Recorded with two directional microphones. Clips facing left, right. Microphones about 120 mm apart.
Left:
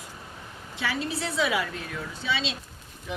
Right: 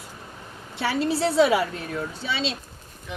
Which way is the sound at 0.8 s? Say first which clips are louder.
Right 7 dB; 35° right (ahead or behind).